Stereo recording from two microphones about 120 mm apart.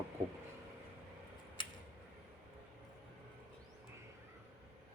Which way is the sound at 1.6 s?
40° left (ahead or behind).